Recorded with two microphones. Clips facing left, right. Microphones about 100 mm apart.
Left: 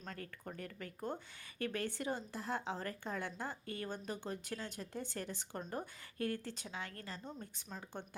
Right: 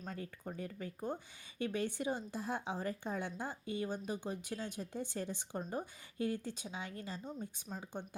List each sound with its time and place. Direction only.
0.0 s speech: 15° right (ahead or behind)
7.3 s speech: 5° right (ahead or behind)